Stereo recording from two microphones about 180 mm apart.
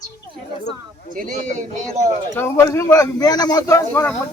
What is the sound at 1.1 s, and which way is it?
A man's voice, 50° right (ahead or behind).